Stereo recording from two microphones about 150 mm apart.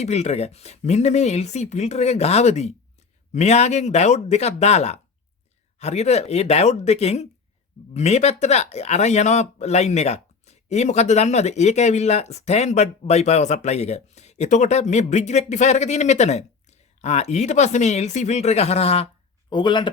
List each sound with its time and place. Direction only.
0.0 s speech: 45° left (ahead or behind)
19.5 s speech: 30° left (ahead or behind)